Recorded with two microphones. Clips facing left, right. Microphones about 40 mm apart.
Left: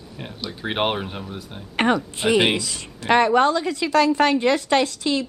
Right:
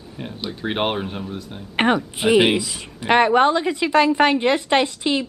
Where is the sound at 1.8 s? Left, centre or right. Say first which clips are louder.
Right 1 dB; centre.